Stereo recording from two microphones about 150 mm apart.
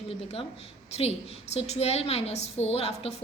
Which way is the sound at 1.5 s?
45° left (ahead or behind).